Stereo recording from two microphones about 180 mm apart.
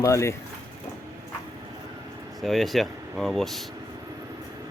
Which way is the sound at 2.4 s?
Centre (ahead or behind).